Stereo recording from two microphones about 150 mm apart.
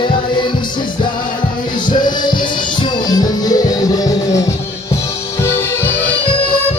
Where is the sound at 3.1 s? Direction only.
25° left (ahead or behind).